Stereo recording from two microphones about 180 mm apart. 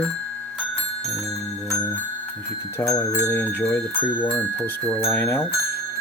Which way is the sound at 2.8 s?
20° left (ahead or behind).